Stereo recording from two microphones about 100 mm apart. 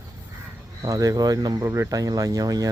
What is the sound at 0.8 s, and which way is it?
Speech, 35° right (ahead or behind).